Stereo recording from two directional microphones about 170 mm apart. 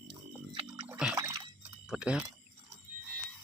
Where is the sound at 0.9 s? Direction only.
5° right (ahead or behind).